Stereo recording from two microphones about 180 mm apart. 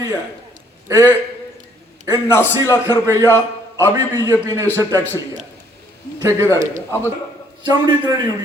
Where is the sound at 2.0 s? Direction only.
15° left (ahead or behind).